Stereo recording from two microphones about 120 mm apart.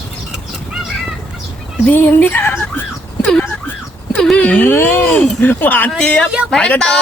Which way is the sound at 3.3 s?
10° left (ahead or behind).